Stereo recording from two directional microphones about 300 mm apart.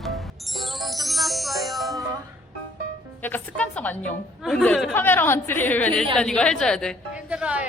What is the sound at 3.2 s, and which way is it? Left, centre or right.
A woman's voice, centre.